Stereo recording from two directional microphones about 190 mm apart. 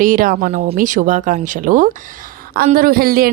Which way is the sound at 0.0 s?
45° right (ahead or behind).